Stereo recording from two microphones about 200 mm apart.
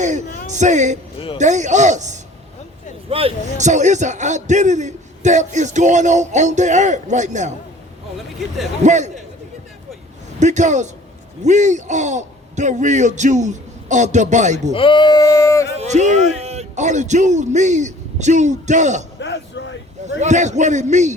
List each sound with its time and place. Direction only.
0.0 s a man's voice: 35° right (ahead or behind)
8.8 s a man's voice: 35° right (ahead or behind)
10.4 s a man's voice: 35° right (ahead or behind)
14.7 s speech: 25° left (ahead or behind)
15.8 s a man's voice: 35° right (ahead or behind)
19.2 s speech: 60° left (ahead or behind)
20.1 s a man's voice: 35° right (ahead or behind)